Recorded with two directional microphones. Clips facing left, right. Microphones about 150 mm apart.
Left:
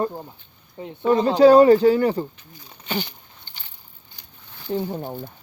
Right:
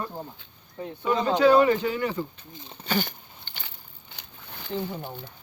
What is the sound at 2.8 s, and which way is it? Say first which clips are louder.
Speech: even; 45° right (ahead or behind).